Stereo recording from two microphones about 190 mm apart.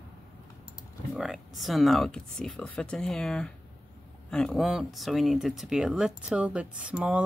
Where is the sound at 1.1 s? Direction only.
Centre (ahead or behind).